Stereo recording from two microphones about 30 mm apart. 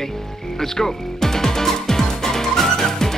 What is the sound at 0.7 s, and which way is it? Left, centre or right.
Music, centre.